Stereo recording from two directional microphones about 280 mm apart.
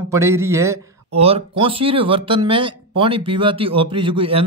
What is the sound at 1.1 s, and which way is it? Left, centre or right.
A man's voice, right.